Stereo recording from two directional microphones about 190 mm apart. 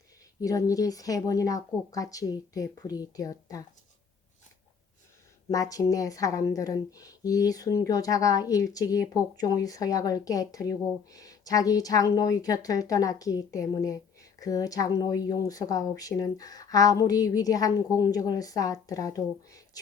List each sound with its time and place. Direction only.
0.4 s speech: 20° left (ahead or behind)
5.5 s speech: 20° left (ahead or behind)